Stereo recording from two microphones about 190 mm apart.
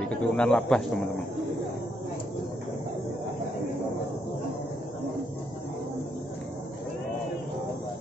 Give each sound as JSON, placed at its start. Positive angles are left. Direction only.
{"t": 0.0, "sound": "speech", "side_deg": 5}